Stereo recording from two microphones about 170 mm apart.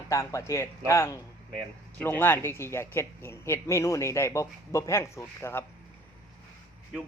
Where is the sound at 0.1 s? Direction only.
20° left (ahead or behind).